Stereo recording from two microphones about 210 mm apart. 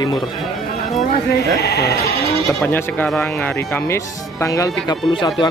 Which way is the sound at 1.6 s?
50° left (ahead or behind).